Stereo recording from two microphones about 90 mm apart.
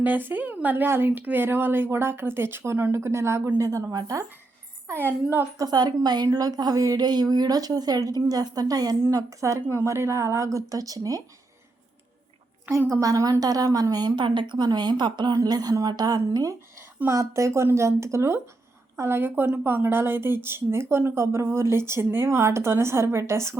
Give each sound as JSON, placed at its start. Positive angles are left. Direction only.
{"t": 0.0, "sound": "a woman's voice", "side_deg": -20}
{"t": 4.9, "sound": "a woman's voice", "side_deg": -25}
{"t": 5.5, "sound": "a woman's voice", "side_deg": -50}
{"t": 12.9, "sound": "a woman's voice", "side_deg": -40}